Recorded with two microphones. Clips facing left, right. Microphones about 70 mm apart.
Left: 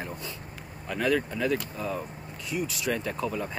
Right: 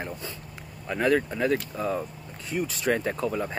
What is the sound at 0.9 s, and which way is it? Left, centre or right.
Speech, right.